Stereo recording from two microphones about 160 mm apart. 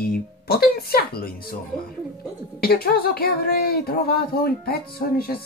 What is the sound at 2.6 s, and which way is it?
A woman's voice, 70° left (ahead or behind).